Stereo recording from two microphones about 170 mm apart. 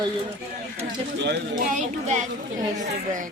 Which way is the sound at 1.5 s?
50° right (ahead or behind).